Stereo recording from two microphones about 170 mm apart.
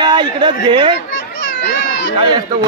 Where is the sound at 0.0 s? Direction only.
25° right (ahead or behind).